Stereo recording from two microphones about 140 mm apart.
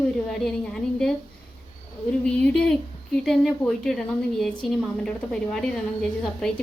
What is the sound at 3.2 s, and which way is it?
Speech, 5° left (ahead or behind).